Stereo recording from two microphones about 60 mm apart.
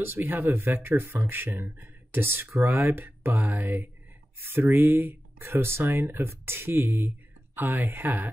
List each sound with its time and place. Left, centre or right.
0.0 s speech: right